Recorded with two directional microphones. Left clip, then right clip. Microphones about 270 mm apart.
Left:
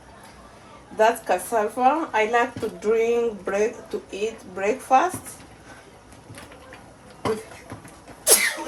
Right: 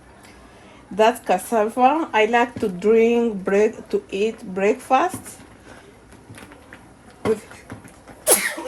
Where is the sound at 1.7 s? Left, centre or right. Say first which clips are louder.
Right 3 dB; right.